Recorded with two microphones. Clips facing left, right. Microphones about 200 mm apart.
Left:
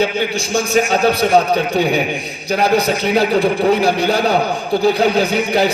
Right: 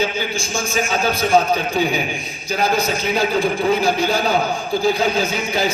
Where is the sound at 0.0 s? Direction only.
65° left (ahead or behind).